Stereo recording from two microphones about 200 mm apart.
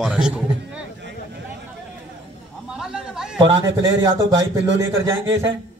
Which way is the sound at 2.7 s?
5° right (ahead or behind).